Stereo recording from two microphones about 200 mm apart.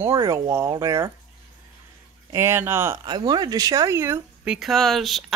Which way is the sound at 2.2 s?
10° right (ahead or behind).